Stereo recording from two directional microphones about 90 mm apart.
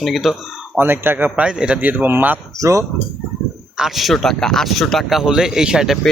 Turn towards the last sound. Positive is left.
turn(degrees=-5)  # may be behind; listen again after turning